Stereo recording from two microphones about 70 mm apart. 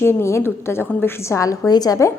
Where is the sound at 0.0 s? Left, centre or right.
Left.